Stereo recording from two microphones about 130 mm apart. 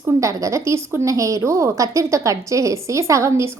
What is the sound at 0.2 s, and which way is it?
A woman's voice, 25° right (ahead or behind).